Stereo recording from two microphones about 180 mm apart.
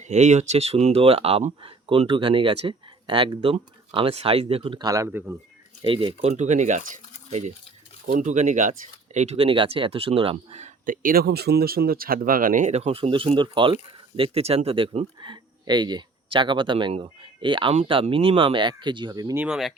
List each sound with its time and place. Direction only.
0.0 s speech: 40° right (ahead or behind); by 5.4 s 10° right (ahead or behind)
5.8 s speech: 30° right (ahead or behind)
19.4 s speech: 5° right (ahead or behind)